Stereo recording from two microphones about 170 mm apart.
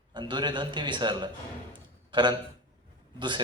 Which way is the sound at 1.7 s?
25° right (ahead or behind).